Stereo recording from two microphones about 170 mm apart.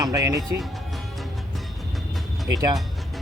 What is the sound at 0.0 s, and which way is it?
Speech, 20° right (ahead or behind).